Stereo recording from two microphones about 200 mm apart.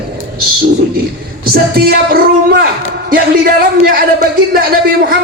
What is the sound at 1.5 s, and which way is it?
A man's voice, 50° right (ahead or behind).